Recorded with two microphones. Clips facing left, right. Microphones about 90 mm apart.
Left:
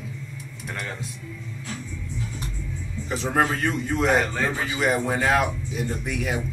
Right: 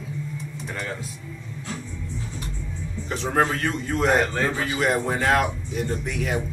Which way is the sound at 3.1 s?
5° left (ahead or behind).